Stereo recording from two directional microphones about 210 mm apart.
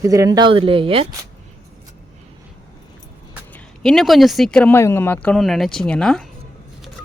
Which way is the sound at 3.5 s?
Centre (ahead or behind).